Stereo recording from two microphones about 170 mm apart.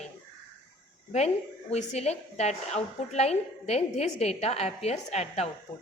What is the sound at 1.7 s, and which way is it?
A woman's voice, 40° left (ahead or behind).